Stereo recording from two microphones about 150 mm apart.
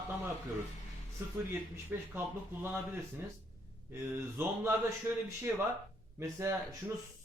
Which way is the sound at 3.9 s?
15° right (ahead or behind).